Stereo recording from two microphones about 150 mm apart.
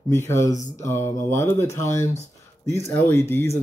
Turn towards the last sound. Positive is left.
turn(degrees=20)  # may be behind; listen again after turning